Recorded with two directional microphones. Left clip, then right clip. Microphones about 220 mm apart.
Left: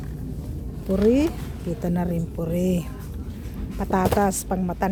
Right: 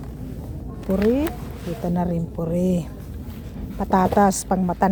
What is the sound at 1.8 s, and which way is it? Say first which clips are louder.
A woman's voice: right 3 dB; centre (ahead or behind).